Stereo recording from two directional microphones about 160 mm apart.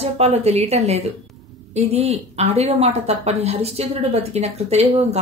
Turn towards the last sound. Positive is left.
turn(degrees=-40)  # may be behind; listen again after turning